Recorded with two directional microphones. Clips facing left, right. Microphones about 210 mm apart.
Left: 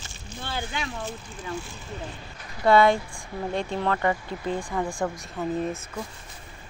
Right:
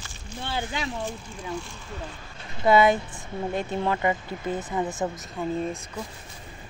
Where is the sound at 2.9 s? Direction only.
20° right (ahead or behind).